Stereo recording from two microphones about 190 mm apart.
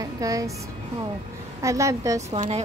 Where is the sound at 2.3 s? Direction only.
35° right (ahead or behind).